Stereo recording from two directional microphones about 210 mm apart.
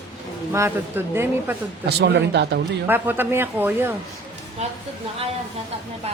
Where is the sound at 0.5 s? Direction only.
10° right (ahead or behind).